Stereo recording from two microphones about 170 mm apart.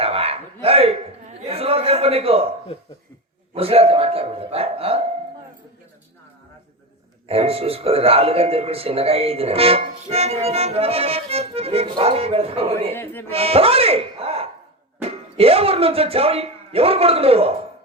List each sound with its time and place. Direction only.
0.0 s a sound: 35° right (ahead or behind)
3.5 s speech: 35° right (ahead or behind)
7.3 s speech: 35° right (ahead or behind)
12.9 s speech: 10° left (ahead or behind)
13.3 s speech: 35° right (ahead or behind)